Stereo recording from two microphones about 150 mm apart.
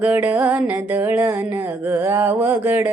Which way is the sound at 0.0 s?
10° right (ahead or behind).